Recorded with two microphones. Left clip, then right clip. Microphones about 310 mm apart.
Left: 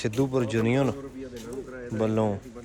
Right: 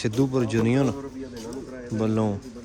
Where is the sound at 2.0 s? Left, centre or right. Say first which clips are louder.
Even; centre.